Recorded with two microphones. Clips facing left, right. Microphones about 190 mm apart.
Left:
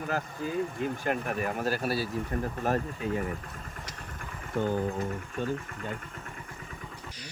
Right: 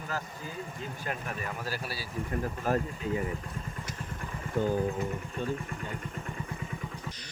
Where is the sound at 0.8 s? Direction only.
55° left (ahead or behind).